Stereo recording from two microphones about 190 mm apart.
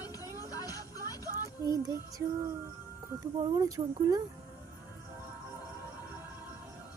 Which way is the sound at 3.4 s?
20° right (ahead or behind).